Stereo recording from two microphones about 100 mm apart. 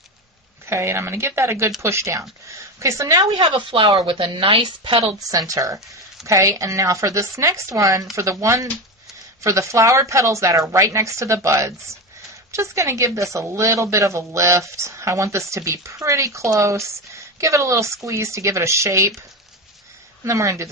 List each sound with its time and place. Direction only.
0.6 s a woman's voice: 25° right (ahead or behind)
3.5 s a woman's voice: 55° right (ahead or behind)
5.3 s a woman's voice: 35° right (ahead or behind)
20.2 s speech: 30° right (ahead or behind)